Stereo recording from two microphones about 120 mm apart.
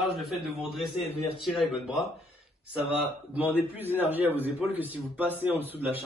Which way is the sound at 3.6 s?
15° right (ahead or behind).